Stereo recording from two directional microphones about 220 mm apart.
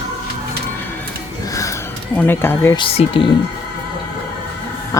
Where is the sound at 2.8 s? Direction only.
25° left (ahead or behind).